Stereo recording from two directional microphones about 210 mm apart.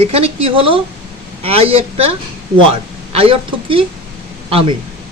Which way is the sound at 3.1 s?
25° right (ahead or behind).